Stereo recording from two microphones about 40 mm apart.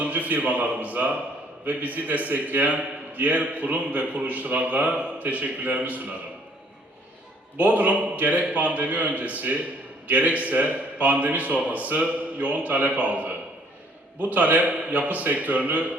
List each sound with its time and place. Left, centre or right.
0.0 s a man's voice: right
7.5 s a man's voice: right